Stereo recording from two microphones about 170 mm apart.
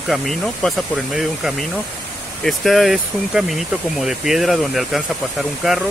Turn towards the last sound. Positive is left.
turn(degrees=0)  # may be behind; listen again after turning